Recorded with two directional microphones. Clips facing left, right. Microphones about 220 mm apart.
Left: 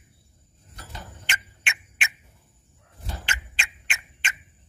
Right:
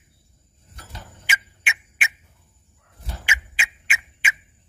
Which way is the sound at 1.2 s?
5° right (ahead or behind).